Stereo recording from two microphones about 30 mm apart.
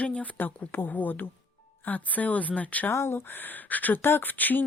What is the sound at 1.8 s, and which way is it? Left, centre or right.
Speech, left.